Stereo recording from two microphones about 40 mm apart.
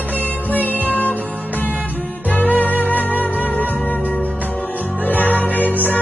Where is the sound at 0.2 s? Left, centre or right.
Left.